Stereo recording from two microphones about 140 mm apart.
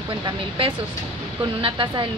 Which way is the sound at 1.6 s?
35° right (ahead or behind).